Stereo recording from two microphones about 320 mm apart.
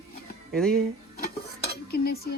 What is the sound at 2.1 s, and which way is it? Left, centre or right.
Speech, left.